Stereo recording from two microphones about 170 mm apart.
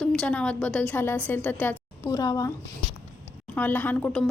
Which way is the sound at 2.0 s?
20° left (ahead or behind).